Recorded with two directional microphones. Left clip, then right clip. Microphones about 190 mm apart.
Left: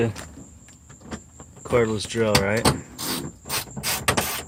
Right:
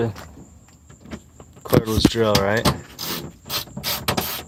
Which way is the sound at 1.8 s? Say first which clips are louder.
Right 2 dB; 15° right (ahead or behind).